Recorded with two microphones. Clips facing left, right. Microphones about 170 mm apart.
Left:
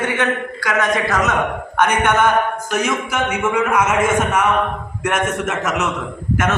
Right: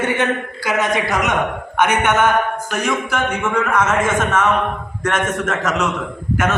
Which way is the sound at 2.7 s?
Centre (ahead or behind).